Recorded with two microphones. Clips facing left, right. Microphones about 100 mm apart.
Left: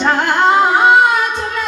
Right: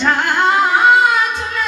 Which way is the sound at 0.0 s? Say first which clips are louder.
Left 2 dB; 25° left (ahead or behind).